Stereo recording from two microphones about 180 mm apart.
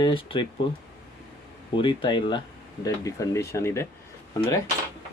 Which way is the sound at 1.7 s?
30° left (ahead or behind).